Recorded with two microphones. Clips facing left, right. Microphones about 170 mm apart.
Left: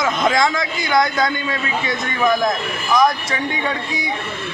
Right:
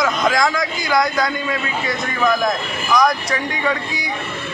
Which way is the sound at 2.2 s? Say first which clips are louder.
Left 1 dB; 20° left (ahead or behind).